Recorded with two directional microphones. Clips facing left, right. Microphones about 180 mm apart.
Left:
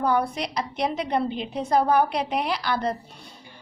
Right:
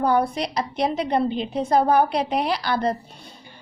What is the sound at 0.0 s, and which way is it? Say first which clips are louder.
A woman's voice: right 3 dB; 35° right (ahead or behind).